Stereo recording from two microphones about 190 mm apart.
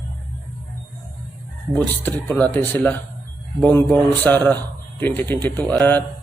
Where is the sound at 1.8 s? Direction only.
10° left (ahead or behind).